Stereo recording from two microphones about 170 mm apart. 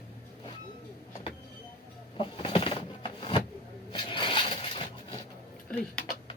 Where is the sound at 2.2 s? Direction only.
30° left (ahead or behind).